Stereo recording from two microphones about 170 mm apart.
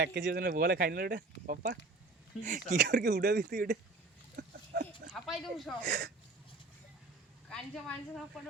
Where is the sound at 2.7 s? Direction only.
90° right.